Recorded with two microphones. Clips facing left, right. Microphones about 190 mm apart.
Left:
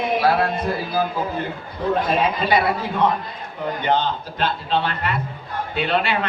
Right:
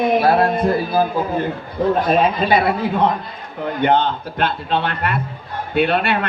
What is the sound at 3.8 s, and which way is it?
A man's voice, 55° right (ahead or behind).